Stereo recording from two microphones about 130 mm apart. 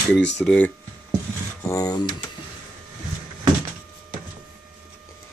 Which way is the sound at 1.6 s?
25° left (ahead or behind).